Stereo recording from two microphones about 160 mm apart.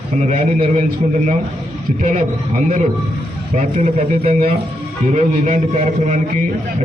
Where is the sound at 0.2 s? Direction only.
50° right (ahead or behind).